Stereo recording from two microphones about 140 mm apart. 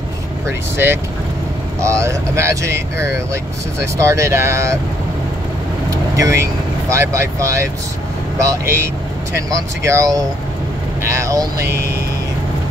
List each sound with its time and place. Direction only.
0.5 s speech: 15° right (ahead or behind)
5.9 s speech: 20° right (ahead or behind)
9.8 s speech: 25° right (ahead or behind)